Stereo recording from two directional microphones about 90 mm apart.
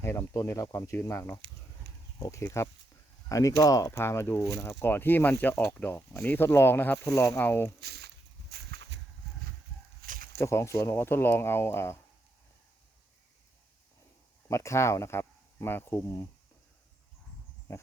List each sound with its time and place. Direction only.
0.0 s speech: 30° left (ahead or behind)
3.9 s speech: 30° left (ahead or behind)
10.3 s speech: 30° left (ahead or behind)
14.4 s speech: 35° left (ahead or behind)